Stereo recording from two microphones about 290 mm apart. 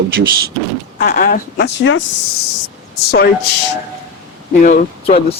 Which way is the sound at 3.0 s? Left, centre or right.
Left.